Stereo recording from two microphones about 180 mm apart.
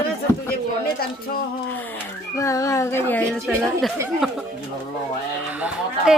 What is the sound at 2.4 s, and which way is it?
Speech, 15° left (ahead or behind).